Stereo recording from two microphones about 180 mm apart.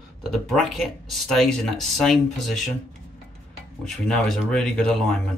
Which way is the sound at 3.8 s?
Centre (ahead or behind).